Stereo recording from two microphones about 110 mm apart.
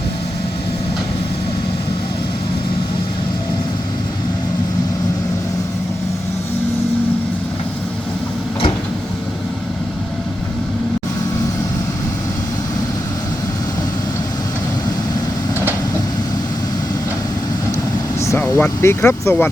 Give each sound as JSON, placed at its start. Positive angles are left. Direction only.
{"t": 18.2, "sound": "vehicle", "side_deg": 25}
{"t": 18.4, "sound": "speech", "side_deg": 20}